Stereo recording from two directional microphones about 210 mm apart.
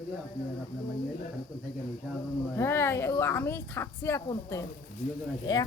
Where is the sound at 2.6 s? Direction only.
10° left (ahead or behind).